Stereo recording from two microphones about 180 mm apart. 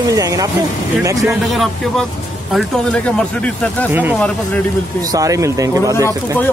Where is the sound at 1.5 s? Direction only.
Centre (ahead or behind).